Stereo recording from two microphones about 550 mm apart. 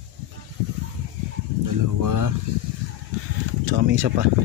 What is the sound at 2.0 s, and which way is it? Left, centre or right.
Speech, right.